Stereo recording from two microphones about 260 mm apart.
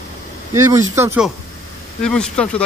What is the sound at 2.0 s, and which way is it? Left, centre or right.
Speech, centre.